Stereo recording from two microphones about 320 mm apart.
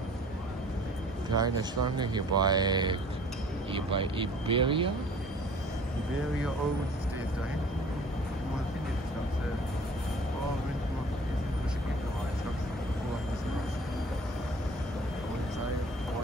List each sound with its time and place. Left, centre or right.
1.3 s speech: centre